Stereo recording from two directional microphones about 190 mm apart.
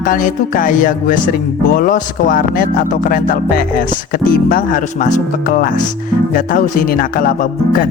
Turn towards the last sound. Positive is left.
turn(degrees=45)  # may be behind; listen again after turning